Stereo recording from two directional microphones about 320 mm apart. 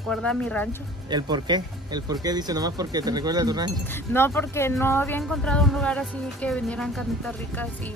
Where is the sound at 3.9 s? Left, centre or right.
Centre.